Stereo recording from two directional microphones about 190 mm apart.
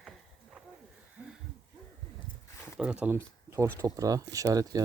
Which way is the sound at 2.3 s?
25° left (ahead or behind).